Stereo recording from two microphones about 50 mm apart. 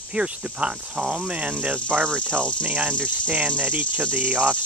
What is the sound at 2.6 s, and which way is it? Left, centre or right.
Cricket, right.